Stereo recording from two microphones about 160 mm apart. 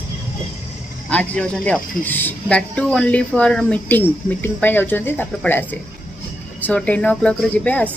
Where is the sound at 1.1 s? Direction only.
5° left (ahead or behind).